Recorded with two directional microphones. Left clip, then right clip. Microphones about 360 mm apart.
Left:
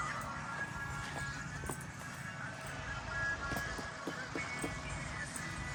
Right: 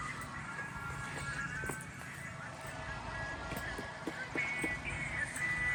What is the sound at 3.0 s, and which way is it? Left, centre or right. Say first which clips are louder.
Music: left 7 dB; right.